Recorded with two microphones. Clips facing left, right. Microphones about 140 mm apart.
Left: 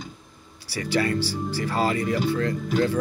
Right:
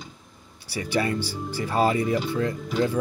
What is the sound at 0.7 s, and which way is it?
Speech, 20° right (ahead or behind).